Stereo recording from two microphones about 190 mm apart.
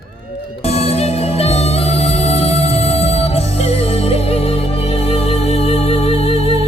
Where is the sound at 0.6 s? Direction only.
35° left (ahead or behind).